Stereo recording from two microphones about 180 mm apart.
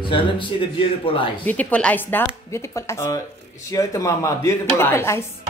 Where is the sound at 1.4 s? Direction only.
10° left (ahead or behind).